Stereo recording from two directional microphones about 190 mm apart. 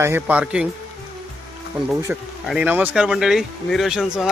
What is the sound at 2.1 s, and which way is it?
Speech, 10° right (ahead or behind).